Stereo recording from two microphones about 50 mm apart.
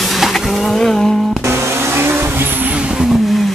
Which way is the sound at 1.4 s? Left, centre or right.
Right.